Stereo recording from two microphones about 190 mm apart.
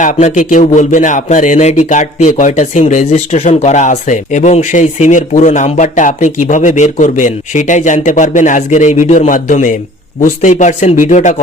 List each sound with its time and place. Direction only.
0.0 s speech: 40° left (ahead or behind)